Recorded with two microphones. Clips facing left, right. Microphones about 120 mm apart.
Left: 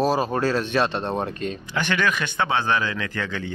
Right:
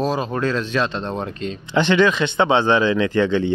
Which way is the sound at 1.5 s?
20° right (ahead or behind).